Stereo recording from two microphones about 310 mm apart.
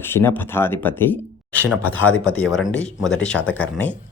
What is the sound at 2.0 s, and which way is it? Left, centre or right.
Speech, left.